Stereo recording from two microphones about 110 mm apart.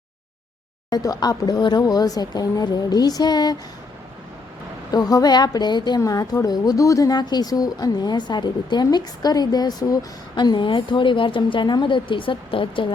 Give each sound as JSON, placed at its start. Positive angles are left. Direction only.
{"t": 0.9, "sound": "speech", "side_deg": 35}
{"t": 4.9, "sound": "speech", "side_deg": 35}